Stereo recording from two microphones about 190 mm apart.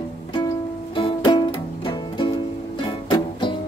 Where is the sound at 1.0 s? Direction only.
25° left (ahead or behind).